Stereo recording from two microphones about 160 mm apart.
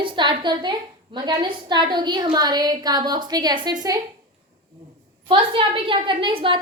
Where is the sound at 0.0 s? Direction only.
30° right (ahead or behind).